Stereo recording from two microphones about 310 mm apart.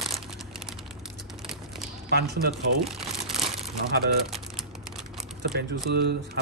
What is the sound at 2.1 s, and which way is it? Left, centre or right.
Speech, right.